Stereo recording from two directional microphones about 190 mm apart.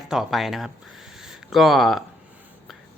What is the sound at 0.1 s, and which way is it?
Speech, centre (ahead or behind).